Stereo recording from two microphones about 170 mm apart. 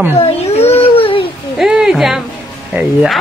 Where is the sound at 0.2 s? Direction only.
40° left (ahead or behind).